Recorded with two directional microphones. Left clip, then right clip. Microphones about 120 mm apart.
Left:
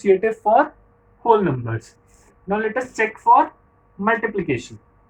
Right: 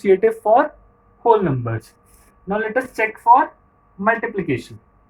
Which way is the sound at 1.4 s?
45° right (ahead or behind).